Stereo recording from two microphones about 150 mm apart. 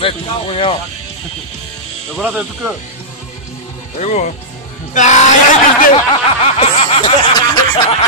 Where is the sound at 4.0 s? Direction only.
50° left (ahead or behind).